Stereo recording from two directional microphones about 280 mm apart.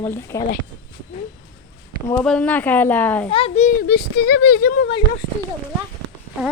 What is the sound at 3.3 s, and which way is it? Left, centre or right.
Speech, centre.